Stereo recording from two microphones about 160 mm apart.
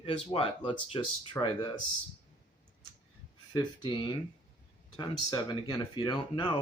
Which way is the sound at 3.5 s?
30° left (ahead or behind).